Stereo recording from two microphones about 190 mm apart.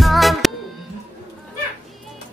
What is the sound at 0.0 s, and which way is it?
Music, centre (ahead or behind).